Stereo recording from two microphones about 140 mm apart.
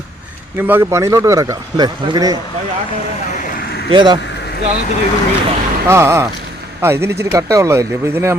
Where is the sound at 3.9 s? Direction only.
35° right (ahead or behind).